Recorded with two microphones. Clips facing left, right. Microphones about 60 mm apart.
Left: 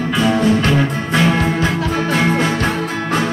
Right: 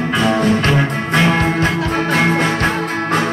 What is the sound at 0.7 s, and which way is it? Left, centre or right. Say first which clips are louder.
Music: even; right.